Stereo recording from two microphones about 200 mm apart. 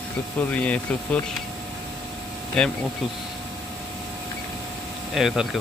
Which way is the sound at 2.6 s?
5° left (ahead or behind).